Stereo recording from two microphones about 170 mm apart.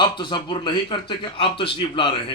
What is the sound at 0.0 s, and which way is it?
A man's voice, 25° left (ahead or behind).